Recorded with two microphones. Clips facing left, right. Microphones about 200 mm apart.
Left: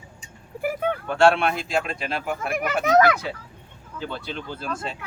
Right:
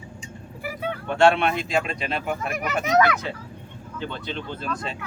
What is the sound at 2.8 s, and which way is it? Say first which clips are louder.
Speech: left 2 dB; 50° left (ahead or behind).